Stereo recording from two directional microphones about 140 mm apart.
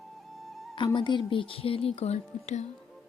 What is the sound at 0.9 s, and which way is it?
Speech, 35° left (ahead or behind).